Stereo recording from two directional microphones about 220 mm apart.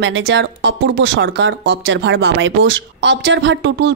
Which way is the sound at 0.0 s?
60° right (ahead or behind).